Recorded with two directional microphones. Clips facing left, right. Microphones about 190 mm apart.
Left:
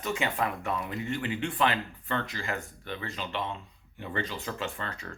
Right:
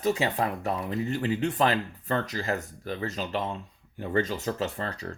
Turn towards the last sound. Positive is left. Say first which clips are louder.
# right 4 dB
turn(degrees=-35)  # may be behind; listen again after turning